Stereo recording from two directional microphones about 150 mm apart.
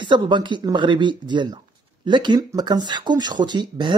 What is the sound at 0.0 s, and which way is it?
Speech, 30° right (ahead or behind).